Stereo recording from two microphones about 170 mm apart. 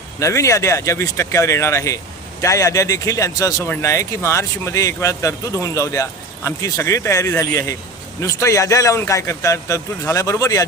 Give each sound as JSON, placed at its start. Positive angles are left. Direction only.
{"t": 0.2, "sound": "a man's voice", "side_deg": 20}